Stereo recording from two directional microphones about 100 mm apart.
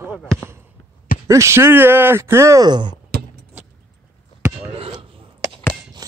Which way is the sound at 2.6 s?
45° right (ahead or behind).